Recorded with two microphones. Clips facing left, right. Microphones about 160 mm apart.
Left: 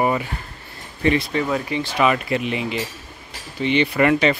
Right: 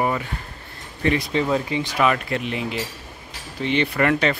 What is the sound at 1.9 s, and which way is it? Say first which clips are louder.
Speech: left 2 dB; 5° left (ahead or behind).